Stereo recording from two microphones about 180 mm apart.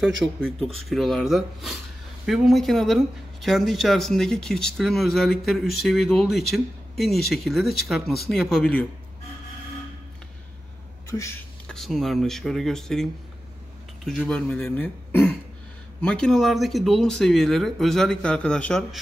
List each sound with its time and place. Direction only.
0.2 s speech: centre (ahead or behind)
11.1 s speech: 15° left (ahead or behind)
11.6 s speech: centre (ahead or behind)